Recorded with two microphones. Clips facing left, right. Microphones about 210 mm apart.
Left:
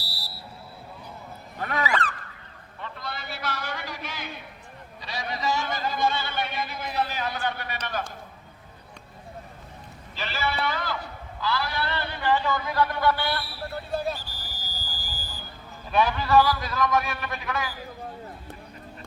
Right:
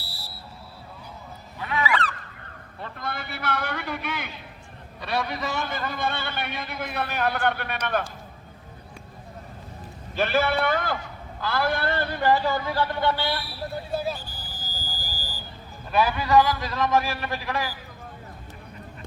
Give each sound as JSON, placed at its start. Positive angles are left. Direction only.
{"t": 1.5, "sound": "a sound", "side_deg": 45}
{"t": 2.8, "sound": "a sound", "side_deg": -55}
{"t": 4.9, "sound": "a man's voice", "side_deg": -60}
{"t": 10.2, "sound": "a man's voice", "side_deg": -55}
{"t": 13.9, "sound": "speech", "side_deg": -5}
{"t": 14.3, "sound": "vehicle", "side_deg": -45}
{"t": 15.9, "sound": "a man's voice", "side_deg": -5}